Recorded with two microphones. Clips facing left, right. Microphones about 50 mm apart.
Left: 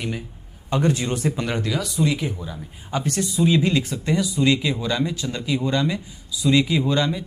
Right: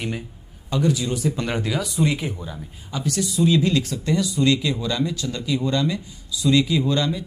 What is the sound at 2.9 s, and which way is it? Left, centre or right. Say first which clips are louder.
Speech: left 1 dB; left.